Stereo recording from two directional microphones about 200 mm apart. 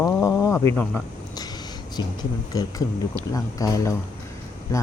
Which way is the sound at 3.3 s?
15° left (ahead or behind).